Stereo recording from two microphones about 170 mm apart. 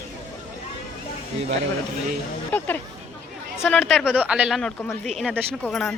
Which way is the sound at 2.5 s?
10° left (ahead or behind).